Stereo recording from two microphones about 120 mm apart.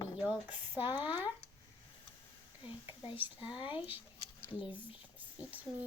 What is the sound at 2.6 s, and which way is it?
Speech, 45° left (ahead or behind).